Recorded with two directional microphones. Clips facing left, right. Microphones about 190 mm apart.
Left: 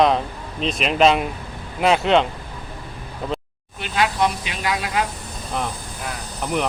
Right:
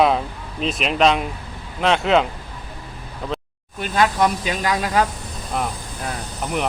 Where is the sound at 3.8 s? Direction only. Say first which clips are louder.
Right 2 dB; 45° right (ahead or behind).